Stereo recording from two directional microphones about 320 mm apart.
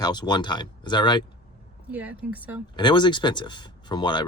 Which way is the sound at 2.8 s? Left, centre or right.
Centre.